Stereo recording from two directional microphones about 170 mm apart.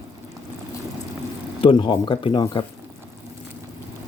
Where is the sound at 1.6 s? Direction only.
30° left (ahead or behind).